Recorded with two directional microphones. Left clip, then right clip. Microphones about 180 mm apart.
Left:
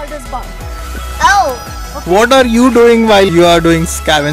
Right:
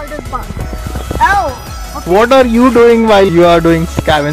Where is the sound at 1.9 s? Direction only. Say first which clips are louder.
Even; 10° left (ahead or behind).